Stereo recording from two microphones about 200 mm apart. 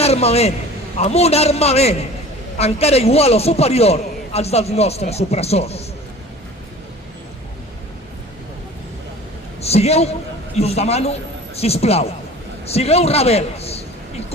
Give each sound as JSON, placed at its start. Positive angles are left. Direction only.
{"t": 0.0, "sound": "a man's voice", "side_deg": 30}
{"t": 9.6, "sound": "a man's voice", "side_deg": 30}